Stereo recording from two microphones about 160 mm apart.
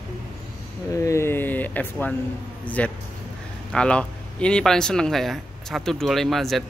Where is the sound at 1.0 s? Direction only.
20° left (ahead or behind).